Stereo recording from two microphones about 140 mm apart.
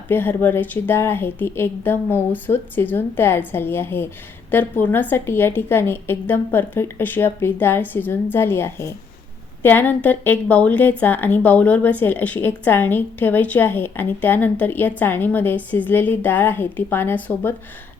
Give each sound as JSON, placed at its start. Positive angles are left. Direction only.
{"t": 0.1, "sound": "a woman's voice", "side_deg": 15}